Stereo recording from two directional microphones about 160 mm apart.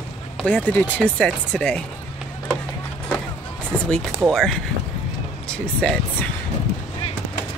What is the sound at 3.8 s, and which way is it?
Speech, 5° left (ahead or behind).